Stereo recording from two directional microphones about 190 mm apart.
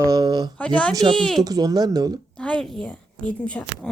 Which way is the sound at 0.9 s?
20° right (ahead or behind).